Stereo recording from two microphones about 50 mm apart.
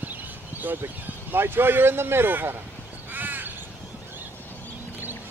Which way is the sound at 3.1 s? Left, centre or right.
Right.